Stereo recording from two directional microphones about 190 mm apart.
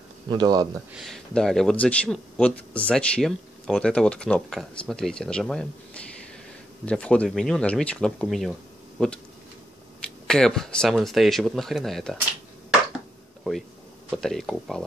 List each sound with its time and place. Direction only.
0.3 s speech: 20° right (ahead or behind)
0.9 s speech: centre (ahead or behind)
6.9 s speech: 5° left (ahead or behind)
10.2 s speech: 5° left (ahead or behind)
13.4 s a sound: centre (ahead or behind)
14.1 s speech: centre (ahead or behind)